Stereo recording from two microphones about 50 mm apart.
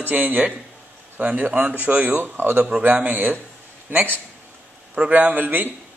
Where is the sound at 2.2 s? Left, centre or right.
Right.